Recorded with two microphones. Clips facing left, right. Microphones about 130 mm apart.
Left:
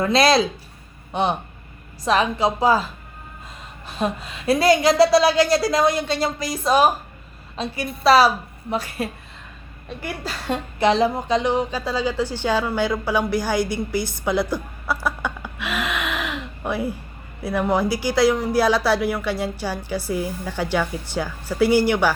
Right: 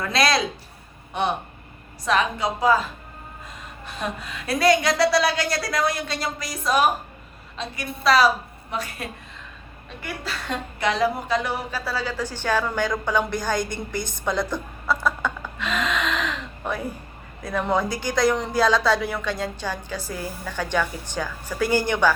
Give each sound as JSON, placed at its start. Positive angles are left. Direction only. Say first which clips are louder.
{"t": 0.0, "sound": "speech", "louder": "left 5 dB", "side_deg": 25}
{"t": 2.0, "sound": "speech", "louder": "left 3 dB", "side_deg": 30}
{"t": 3.8, "sound": "a woman's voice", "louder": "left 6 dB", "side_deg": 25}
{"t": 15.0, "sound": "gasp", "louder": "right 1 dB", "side_deg": 10}
{"t": 17.4, "sound": "speech", "louder": "left 3 dB", "side_deg": 10}